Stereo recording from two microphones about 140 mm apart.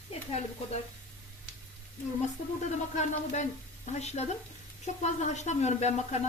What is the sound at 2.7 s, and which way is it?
Speech, 60° left (ahead or behind).